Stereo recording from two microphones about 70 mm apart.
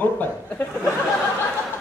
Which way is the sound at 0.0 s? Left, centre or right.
Left.